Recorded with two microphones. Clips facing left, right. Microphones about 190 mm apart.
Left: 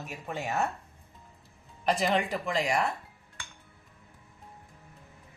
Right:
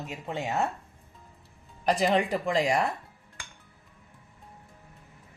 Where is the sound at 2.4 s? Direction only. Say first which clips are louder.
Right 3 dB; 30° right (ahead or behind).